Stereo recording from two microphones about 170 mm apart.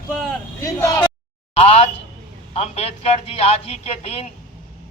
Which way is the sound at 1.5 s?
40° left (ahead or behind).